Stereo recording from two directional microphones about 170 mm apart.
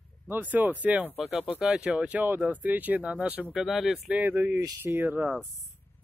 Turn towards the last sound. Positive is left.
turn(degrees=-10)  # may be behind; listen again after turning